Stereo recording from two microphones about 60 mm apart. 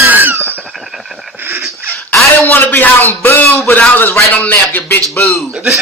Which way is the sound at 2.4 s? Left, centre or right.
Left.